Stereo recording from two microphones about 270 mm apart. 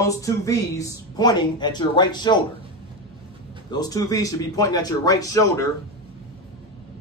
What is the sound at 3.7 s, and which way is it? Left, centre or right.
Speech, centre.